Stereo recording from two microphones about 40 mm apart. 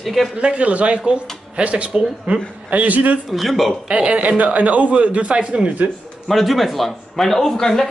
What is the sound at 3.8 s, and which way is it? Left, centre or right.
A man's voice, right.